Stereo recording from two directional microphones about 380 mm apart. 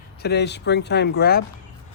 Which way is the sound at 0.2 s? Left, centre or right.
Left.